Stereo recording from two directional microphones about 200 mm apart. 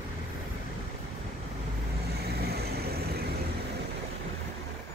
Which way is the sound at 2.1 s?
50° right (ahead or behind).